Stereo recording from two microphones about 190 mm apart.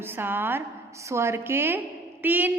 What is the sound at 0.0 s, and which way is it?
A woman's voice, 10° right (ahead or behind).